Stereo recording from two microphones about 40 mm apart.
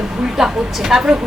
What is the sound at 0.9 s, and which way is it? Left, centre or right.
Speech, centre.